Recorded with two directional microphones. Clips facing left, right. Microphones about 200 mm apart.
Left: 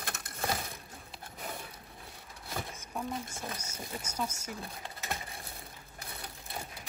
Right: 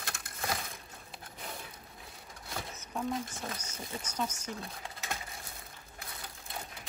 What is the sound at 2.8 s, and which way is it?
Speech, 5° left (ahead or behind).